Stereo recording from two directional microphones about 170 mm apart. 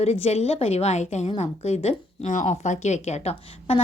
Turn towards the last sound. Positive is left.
turn(degrees=40)  # may be behind; listen again after turning